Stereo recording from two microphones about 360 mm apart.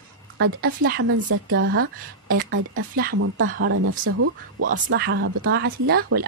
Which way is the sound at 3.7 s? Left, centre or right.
Right.